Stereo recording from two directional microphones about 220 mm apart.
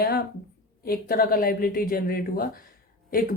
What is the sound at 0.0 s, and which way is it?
A woman's voice, 45° left (ahead or behind).